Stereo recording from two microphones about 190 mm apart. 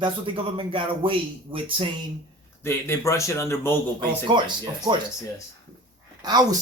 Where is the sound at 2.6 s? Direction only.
15° left (ahead or behind).